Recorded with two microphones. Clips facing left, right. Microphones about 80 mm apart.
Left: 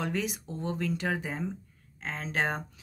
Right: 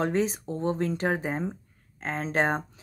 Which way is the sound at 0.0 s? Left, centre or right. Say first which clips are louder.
Right 6 dB; right.